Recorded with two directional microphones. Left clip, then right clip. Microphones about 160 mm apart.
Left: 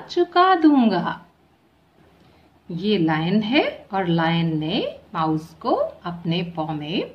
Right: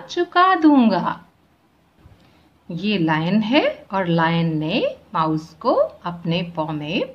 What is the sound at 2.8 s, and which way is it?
A woman's voice, 30° right (ahead or behind).